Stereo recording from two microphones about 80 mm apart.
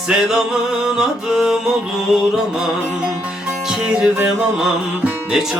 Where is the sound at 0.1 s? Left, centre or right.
Centre.